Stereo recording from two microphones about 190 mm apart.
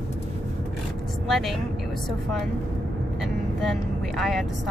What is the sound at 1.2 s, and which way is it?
Speech, centre (ahead or behind).